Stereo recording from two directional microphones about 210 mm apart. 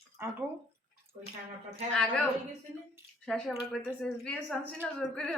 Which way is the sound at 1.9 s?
5° left (ahead or behind).